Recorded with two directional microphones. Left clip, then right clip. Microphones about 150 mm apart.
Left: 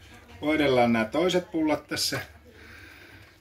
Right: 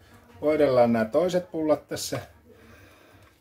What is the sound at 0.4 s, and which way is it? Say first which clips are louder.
Speech: right 3 dB; 65° right (ahead or behind).